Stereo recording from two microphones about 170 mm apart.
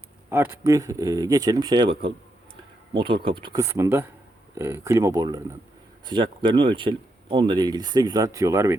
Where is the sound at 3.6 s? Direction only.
15° right (ahead or behind).